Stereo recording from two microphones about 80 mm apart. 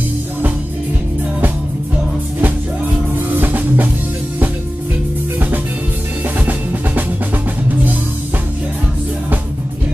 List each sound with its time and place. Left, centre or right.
3.2 s music: right